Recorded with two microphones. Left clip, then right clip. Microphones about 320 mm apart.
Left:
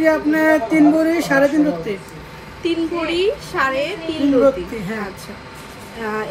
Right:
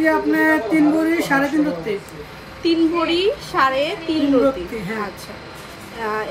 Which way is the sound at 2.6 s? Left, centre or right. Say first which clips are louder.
Right 3 dB; right.